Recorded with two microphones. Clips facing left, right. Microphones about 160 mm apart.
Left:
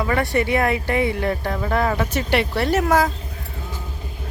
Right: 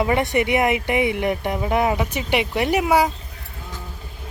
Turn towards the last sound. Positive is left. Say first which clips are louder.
# even
turn(degrees=-15)  # may be behind; listen again after turning